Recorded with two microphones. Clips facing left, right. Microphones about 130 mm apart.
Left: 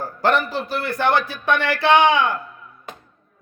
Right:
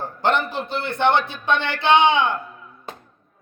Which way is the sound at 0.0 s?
25° right (ahead or behind).